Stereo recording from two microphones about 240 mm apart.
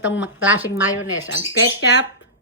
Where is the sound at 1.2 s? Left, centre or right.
Left.